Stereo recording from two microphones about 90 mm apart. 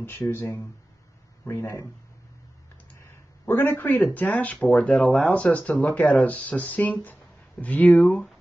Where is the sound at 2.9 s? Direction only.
25° left (ahead or behind).